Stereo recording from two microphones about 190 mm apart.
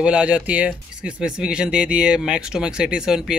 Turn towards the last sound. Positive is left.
turn(degrees=-5)  # may be behind; listen again after turning